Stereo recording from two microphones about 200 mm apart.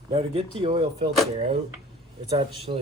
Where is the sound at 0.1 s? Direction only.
30° right (ahead or behind).